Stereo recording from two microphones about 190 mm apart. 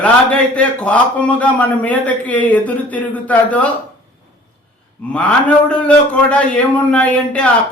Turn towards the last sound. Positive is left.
turn(degrees=5)  # may be behind; listen again after turning